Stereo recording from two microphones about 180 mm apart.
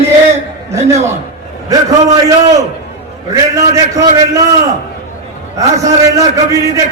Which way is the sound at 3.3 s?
20° right (ahead or behind).